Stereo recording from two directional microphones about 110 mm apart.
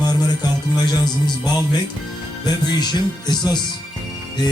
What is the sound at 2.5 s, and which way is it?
A man's voice, 40° left (ahead or behind).